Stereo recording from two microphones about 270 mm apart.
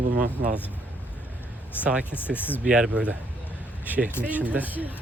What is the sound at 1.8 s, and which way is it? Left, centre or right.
Speech, centre.